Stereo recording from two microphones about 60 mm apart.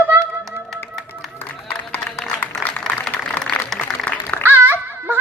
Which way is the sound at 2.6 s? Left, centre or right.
Centre.